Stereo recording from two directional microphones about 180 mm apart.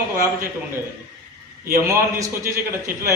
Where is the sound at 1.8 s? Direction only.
15° right (ahead or behind).